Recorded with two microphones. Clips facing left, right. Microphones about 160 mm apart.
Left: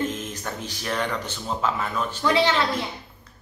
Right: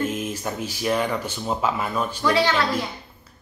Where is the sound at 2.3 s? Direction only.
25° left (ahead or behind).